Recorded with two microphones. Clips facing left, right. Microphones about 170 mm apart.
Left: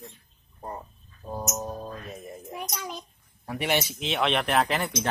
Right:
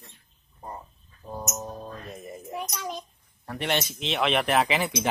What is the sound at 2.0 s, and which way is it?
Speech, centre (ahead or behind).